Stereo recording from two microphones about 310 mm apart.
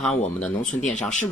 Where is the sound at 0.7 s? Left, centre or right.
Left.